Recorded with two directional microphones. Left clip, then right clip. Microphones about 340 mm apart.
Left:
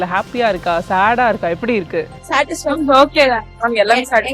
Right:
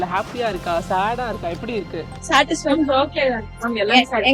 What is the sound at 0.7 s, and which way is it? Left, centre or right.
Speech, left.